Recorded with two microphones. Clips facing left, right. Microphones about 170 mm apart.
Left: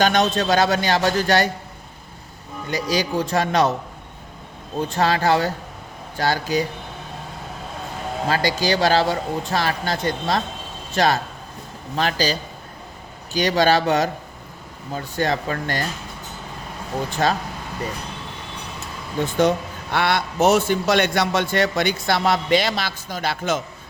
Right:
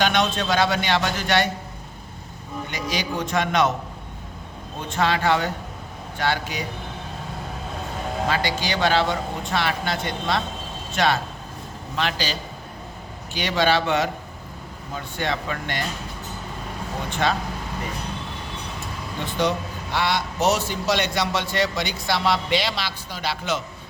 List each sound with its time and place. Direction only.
0.0 s speech: 40° left (ahead or behind)
2.6 s speech: 35° left (ahead or behind)
4.9 s speech: 40° left (ahead or behind)
8.3 s speech: 40° left (ahead or behind)
17.1 s speech: 40° left (ahead or behind)
19.2 s a man's voice: 50° left (ahead or behind)